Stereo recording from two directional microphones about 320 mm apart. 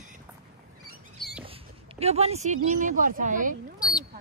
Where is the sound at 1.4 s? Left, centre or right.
Centre.